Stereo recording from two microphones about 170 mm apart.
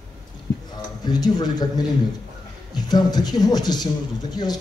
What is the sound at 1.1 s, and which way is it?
A man's voice, 25° left (ahead or behind).